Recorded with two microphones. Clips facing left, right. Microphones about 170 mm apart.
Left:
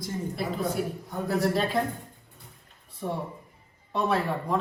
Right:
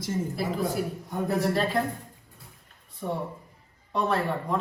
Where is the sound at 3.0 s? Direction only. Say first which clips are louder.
Right 1 dB; centre (ahead or behind).